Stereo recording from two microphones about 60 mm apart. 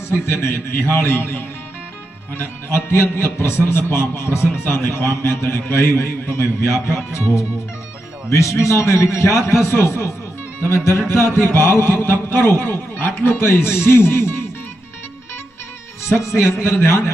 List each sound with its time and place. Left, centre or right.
0.3 s a man's voice: left
2.4 s a man's voice: left
8.3 s a man's voice: left
9.6 s a man's voice: left
11.1 s a man's voice: left
16.2 s a man's voice: centre
16.5 s a man's voice: left